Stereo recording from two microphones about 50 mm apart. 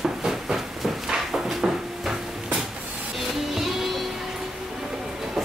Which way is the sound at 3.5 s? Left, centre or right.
Centre.